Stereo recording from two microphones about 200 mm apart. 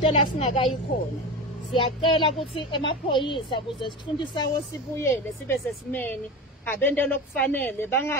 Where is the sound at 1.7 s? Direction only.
25° left (ahead or behind).